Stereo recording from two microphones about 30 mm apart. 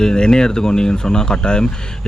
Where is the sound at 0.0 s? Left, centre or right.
Left.